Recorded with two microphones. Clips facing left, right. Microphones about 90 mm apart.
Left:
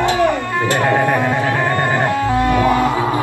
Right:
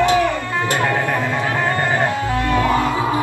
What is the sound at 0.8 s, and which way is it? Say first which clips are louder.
Music: left 4 dB; 25° left (ahead or behind).